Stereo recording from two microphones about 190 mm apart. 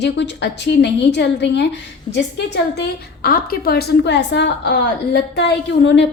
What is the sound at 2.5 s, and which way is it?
A woman's voice, 55° left (ahead or behind).